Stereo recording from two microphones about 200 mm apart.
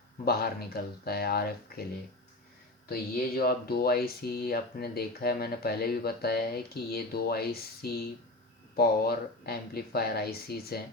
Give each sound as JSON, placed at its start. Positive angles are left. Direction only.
{"t": 0.3, "sound": "speech", "side_deg": 50}
{"t": 2.9, "sound": "speech", "side_deg": 50}